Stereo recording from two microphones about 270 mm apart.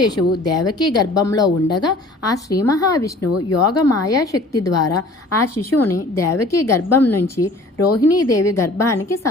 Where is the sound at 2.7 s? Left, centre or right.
Centre.